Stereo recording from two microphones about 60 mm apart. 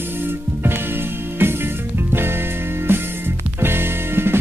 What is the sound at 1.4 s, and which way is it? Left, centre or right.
Music, right.